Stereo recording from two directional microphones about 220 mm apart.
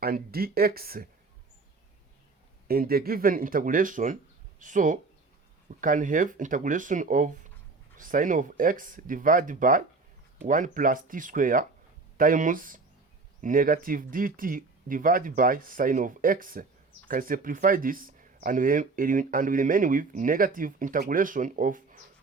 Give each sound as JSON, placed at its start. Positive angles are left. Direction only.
{"t": 0.0, "sound": "speech", "side_deg": -45}
{"t": 2.6, "sound": "speech", "side_deg": -45}